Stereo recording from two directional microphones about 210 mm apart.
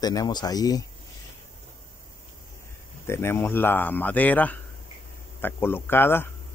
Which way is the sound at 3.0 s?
10° left (ahead or behind).